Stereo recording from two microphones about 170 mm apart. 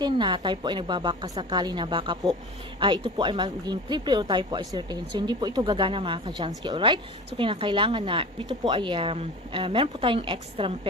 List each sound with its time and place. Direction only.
0.0 s speech: 30° right (ahead or behind)